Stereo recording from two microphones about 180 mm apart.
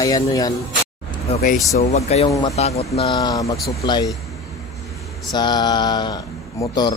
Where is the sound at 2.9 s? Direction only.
25° left (ahead or behind).